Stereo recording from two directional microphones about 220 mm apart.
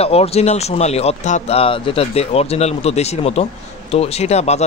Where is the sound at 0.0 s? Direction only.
25° left (ahead or behind).